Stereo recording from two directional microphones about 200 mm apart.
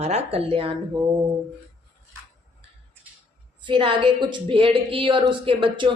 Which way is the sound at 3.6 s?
25° right (ahead or behind).